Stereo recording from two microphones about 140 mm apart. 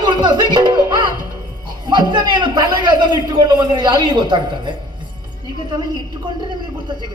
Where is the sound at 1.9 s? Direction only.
30° right (ahead or behind).